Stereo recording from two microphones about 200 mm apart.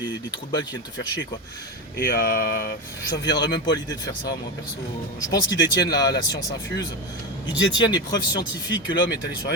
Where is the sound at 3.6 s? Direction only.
20° left (ahead or behind).